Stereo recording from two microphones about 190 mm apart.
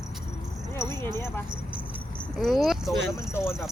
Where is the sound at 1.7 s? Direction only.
5° right (ahead or behind).